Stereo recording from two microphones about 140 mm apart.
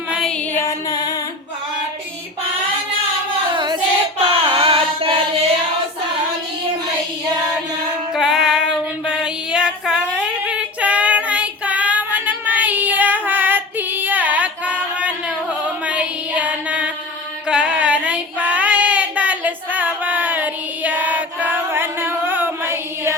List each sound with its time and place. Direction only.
0.1 s a sound: centre (ahead or behind)
0.5 s music: 20° left (ahead or behind)
4.4 s music: 40° right (ahead or behind)
8.1 s female singing: 5° right (ahead or behind)
17.5 s child singing: 5° right (ahead or behind)